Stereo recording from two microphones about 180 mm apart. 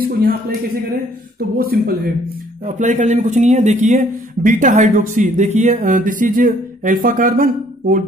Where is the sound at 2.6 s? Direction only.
45° right (ahead or behind).